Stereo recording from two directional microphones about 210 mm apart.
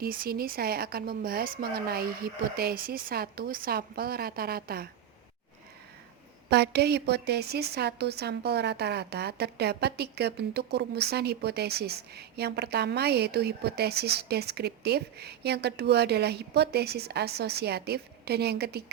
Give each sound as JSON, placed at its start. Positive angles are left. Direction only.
{"t": 0.0, "sound": "a woman's voice", "side_deg": -45}
{"t": 6.5, "sound": "a woman's voice", "side_deg": -50}